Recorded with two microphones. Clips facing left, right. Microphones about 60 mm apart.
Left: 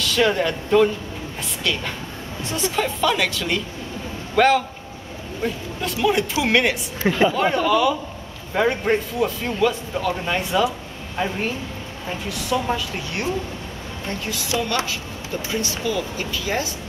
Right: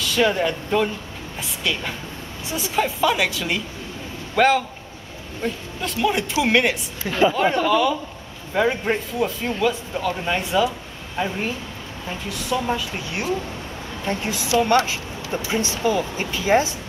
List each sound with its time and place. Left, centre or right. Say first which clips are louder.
0.0 s speech: even; centre
14.0 s speech: right 3 dB; right